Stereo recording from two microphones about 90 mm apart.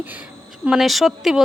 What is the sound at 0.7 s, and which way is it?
Speech, centre (ahead or behind).